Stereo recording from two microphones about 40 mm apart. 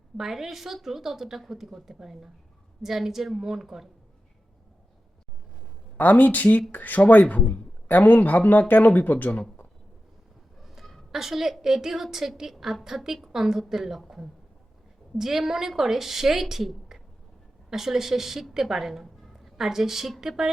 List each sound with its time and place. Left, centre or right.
0.2 s a woman's voice: centre
6.0 s speech: left
10.6 s a sound: centre
11.1 s a woman's voice: centre
15.2 s a woman's voice: centre